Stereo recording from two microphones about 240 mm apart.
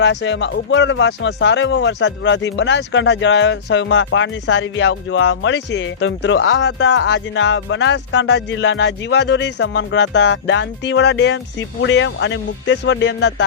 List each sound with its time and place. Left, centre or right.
0.0 s speech: left